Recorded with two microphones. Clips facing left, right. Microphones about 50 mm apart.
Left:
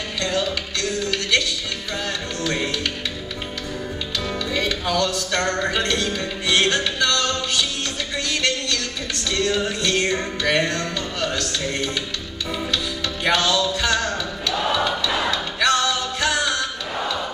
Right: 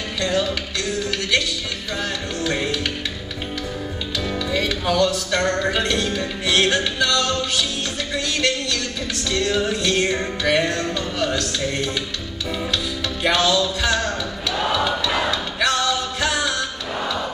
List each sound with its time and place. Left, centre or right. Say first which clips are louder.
0.2 s music: right 2 dB; centre
2.4 s music: right 1 dB; centre
4.5 s music: right 2 dB; centre
9.3 s music: right 1 dB; centre
14.5 s a sound: right 1 dB; centre
15.0 s music: right 1 dB; centre